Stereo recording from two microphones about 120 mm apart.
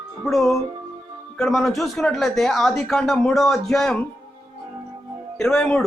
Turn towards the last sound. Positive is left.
turn(degrees=5)  # may be behind; listen again after turning